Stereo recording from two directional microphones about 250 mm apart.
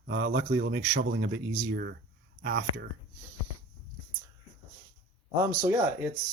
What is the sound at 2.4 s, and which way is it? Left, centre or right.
Speech, right.